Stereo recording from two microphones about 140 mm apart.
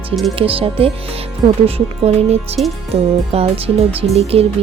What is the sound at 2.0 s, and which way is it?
Speech, 50° right (ahead or behind).